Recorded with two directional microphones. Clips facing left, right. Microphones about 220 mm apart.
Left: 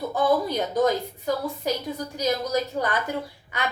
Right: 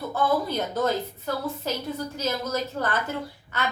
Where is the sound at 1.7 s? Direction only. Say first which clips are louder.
Left 2 dB; 15° left (ahead or behind).